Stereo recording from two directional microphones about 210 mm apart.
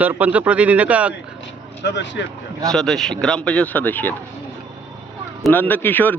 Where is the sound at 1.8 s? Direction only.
60° left (ahead or behind).